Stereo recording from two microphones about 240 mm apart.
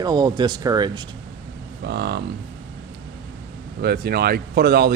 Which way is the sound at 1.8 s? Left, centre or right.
Right.